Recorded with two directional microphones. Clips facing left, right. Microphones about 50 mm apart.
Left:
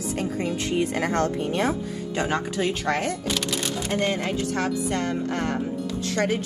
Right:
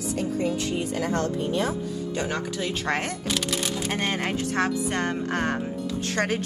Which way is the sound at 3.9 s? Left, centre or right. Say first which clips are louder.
Left 4 dB; right.